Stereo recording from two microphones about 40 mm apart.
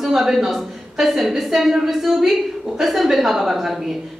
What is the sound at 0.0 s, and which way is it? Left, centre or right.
A woman's voice, centre.